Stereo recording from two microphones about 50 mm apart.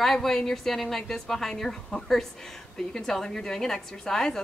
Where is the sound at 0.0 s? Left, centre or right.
Centre.